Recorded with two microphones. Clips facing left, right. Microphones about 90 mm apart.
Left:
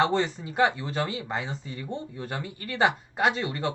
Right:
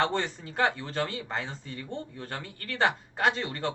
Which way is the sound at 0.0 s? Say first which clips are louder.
Left 4 dB; 15° left (ahead or behind).